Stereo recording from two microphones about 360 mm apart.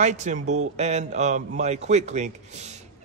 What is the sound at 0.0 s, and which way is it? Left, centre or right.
Speech, centre.